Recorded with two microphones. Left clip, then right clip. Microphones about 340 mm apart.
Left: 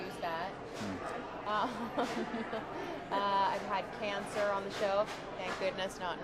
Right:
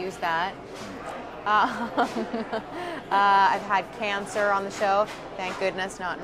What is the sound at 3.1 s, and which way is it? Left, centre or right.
A woman's voice, right.